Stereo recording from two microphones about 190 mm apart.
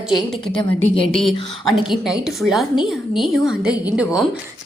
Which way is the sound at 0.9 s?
30° left (ahead or behind).